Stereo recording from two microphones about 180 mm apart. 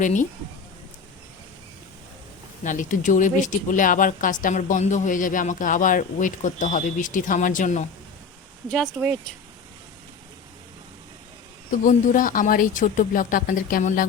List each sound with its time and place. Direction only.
0.0 s speech: 45° left (ahead or behind)
2.6 s speech: 45° left (ahead or behind)
8.7 s speech: centre (ahead or behind)
11.9 s speech: 45° left (ahead or behind)